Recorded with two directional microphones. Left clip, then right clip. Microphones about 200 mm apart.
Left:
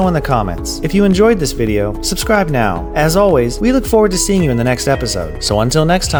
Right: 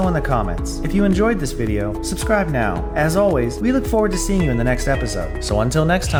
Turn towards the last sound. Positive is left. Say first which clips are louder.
# left 5 dB
turn(degrees=40)  # may be behind; listen again after turning